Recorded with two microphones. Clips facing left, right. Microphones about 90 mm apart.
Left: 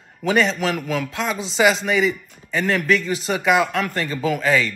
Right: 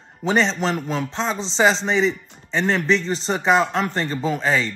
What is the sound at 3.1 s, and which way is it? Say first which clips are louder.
Speech: even; 5° left (ahead or behind).